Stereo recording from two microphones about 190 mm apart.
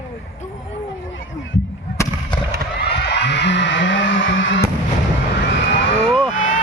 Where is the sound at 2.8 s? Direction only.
60° left (ahead or behind); by 4.6 s 80° left.